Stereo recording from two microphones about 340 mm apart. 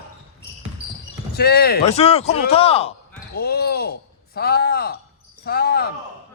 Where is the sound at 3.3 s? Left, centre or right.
Left.